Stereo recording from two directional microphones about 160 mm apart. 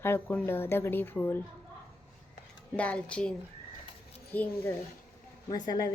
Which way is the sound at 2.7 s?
10° left (ahead or behind).